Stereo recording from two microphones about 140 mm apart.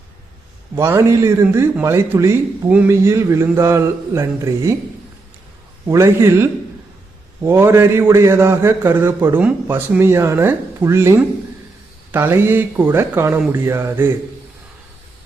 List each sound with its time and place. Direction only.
0.8 s a man's voice: 20° right (ahead or behind)
5.9 s a man's voice: 20° right (ahead or behind)